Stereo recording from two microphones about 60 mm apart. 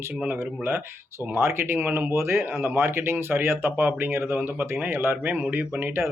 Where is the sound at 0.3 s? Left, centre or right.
Right.